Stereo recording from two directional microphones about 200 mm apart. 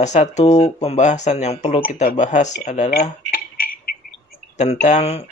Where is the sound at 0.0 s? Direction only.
35° left (ahead or behind).